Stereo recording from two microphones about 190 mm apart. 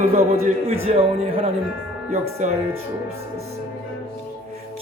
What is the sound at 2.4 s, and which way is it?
Speech, 40° right (ahead or behind).